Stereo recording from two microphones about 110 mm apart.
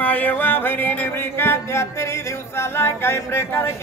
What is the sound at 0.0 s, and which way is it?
Music, 15° left (ahead or behind).